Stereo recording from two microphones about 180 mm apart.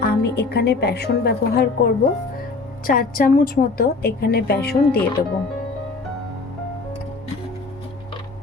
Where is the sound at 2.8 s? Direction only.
50° left (ahead or behind).